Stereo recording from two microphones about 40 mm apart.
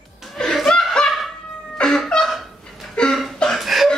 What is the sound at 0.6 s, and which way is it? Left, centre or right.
Chuckle, centre.